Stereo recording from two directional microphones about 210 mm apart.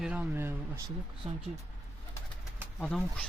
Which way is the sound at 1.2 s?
30° right (ahead or behind).